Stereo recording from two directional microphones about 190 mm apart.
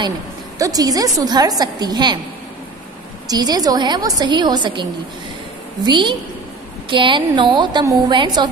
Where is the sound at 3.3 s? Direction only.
20° right (ahead or behind).